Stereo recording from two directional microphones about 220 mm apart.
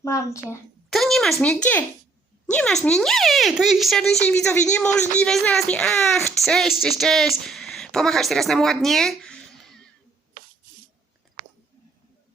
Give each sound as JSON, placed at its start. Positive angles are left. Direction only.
{"t": 0.0, "sound": "a woman's voice", "side_deg": 15}
{"t": 0.9, "sound": "speech", "side_deg": 0}
{"t": 10.4, "sound": "a sound", "side_deg": -40}
{"t": 11.4, "sound": "chewing", "side_deg": -20}